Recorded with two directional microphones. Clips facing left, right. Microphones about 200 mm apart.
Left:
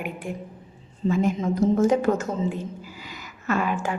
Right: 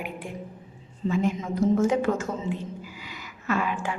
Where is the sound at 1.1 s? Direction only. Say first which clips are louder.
Left 3 dB; 45° left (ahead or behind).